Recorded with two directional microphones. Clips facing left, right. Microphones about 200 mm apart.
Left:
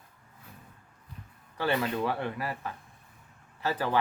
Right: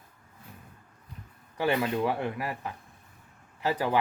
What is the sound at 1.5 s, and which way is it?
Speech, 15° right (ahead or behind).